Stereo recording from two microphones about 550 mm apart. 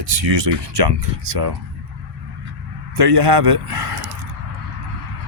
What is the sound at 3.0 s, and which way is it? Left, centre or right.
Speech, right.